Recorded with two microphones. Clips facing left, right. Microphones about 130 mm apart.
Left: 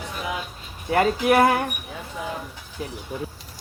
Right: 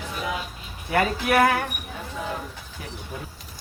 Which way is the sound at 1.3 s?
20° left (ahead or behind).